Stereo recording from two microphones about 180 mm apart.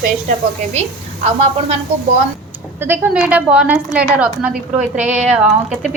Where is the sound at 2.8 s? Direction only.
10° right (ahead or behind).